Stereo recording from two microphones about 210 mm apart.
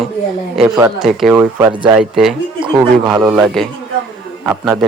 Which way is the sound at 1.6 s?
20° right (ahead or behind).